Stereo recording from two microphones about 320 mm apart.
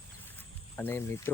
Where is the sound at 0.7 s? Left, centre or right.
Centre.